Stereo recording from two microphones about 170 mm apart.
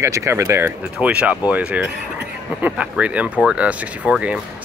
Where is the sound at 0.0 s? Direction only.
15° right (ahead or behind).